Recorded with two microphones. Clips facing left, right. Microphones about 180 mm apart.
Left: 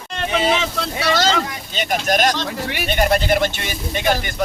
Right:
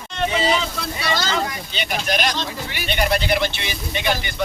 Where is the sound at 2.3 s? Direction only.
65° left (ahead or behind).